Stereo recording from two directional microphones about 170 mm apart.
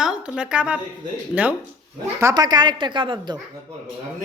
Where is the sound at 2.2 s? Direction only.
20° right (ahead or behind).